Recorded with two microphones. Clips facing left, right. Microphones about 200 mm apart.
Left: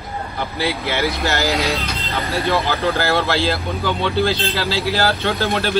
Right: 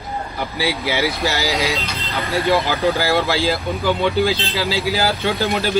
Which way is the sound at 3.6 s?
15° right (ahead or behind).